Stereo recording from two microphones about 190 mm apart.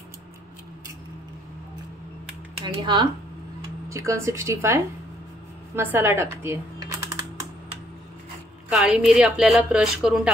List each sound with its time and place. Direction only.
2.6 s a woman's voice: 25° right (ahead or behind)
5.8 s computer keyboard: 10° right (ahead or behind)
8.6 s a woman's voice: 5° right (ahead or behind)